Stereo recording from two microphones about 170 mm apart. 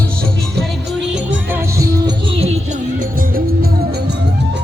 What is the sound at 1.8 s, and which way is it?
Music, 20° right (ahead or behind).